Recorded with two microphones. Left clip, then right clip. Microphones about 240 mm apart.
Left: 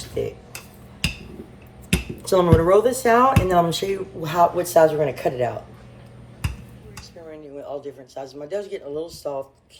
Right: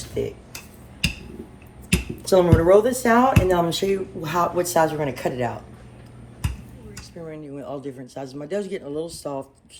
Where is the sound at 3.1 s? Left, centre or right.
Right.